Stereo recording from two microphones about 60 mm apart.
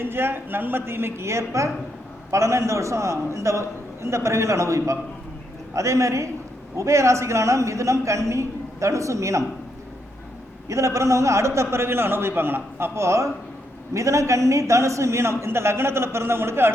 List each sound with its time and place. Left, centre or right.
0.0 s a woman's voice: right
10.7 s a man's voice: right
13.0 s a man's voice: right